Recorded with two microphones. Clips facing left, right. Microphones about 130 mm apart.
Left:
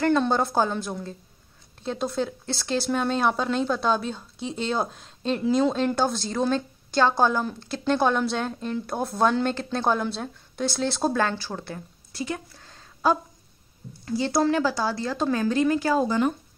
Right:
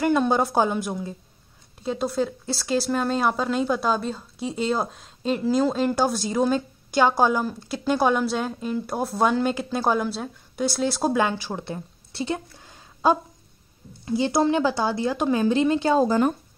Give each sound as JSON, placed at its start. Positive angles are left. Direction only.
{"t": 0.0, "sound": "a woman's voice", "side_deg": -10}
{"t": 16.1, "sound": "speech", "side_deg": -40}